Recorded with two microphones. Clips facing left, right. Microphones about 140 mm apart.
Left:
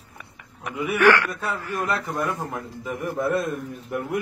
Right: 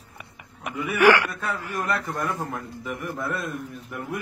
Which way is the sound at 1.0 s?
15° right (ahead or behind).